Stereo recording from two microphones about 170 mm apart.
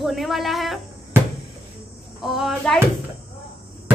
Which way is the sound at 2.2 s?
Centre (ahead or behind).